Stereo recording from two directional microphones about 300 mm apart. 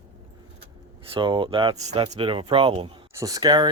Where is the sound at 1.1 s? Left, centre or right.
Centre.